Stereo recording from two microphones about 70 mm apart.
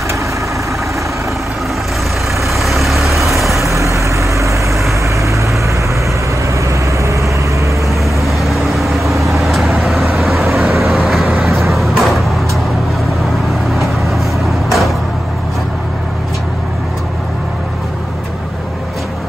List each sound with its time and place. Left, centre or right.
2.4 s vehicle: centre
3.5 s vehicle: right
8.0 s vehicle: centre
11.4 s a sound: centre
13.7 s vehicle: centre